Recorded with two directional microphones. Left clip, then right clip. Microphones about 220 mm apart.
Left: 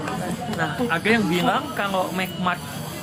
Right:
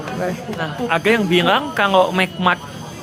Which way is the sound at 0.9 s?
45° right (ahead or behind).